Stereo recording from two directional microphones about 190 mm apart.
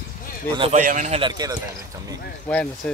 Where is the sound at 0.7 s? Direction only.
45° right (ahead or behind).